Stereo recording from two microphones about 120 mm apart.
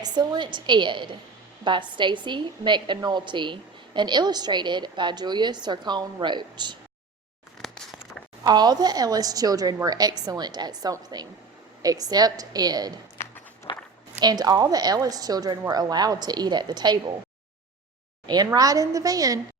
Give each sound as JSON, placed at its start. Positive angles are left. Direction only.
{"t": 0.0, "sound": "a woman's voice", "side_deg": -35}
{"t": 8.4, "sound": "a woman's voice", "side_deg": -35}
{"t": 13.2, "sound": "walk", "side_deg": 20}
{"t": 14.2, "sound": "a woman's voice", "side_deg": -35}
{"t": 18.3, "sound": "a woman's voice", "side_deg": -35}